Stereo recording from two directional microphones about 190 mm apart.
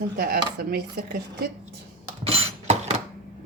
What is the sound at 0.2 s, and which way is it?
Speech, 50° right (ahead or behind).